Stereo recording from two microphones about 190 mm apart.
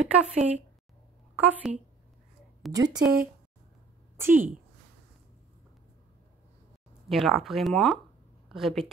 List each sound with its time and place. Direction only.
0.0 s a woman's voice: 5° right (ahead or behind)
2.7 s speech: 20° right (ahead or behind)
4.2 s a woman's voice: 10° right (ahead or behind)
7.1 s speech: centre (ahead or behind)